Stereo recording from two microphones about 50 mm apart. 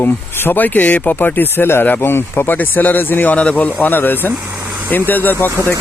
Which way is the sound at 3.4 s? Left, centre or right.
Left.